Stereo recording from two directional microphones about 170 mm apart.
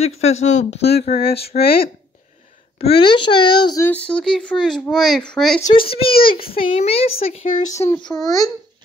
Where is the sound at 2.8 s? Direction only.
35° left (ahead or behind).